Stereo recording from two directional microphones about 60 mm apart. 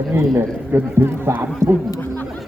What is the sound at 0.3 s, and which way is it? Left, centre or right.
A man's voice, right.